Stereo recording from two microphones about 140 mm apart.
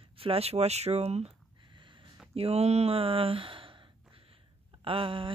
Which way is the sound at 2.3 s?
45° right (ahead or behind).